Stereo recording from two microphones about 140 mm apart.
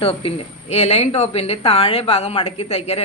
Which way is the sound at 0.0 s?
40° left (ahead or behind).